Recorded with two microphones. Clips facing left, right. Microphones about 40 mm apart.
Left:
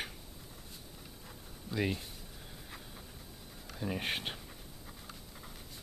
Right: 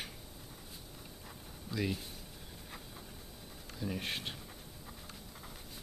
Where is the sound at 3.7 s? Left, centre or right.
Left.